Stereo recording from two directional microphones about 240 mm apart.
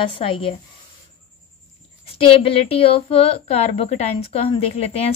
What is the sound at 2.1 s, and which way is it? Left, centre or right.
Speech, left.